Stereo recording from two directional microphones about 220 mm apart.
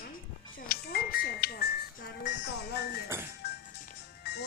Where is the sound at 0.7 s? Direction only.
45° left (ahead or behind).